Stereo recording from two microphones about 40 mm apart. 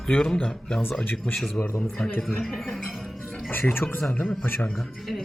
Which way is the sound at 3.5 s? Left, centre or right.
Left.